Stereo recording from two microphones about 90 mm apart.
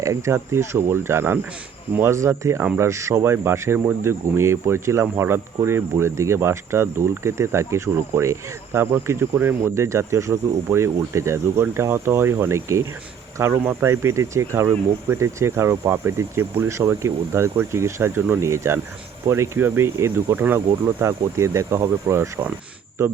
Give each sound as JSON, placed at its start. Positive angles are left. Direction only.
{"t": 0.0, "sound": "speech", "side_deg": -35}